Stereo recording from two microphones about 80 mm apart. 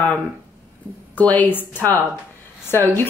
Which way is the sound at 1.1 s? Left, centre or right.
Left.